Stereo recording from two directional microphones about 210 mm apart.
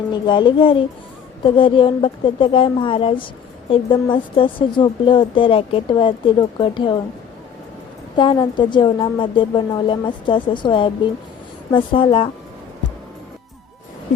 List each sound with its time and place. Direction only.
0.1 s a woman's voice: 20° left (ahead or behind)
8.1 s a woman's voice: 20° left (ahead or behind)